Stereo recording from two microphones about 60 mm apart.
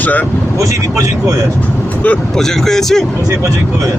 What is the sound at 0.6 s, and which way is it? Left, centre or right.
Speech, right.